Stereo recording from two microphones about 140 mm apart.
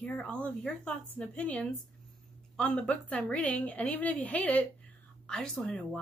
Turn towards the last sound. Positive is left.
turn(degrees=5)  # may be behind; listen again after turning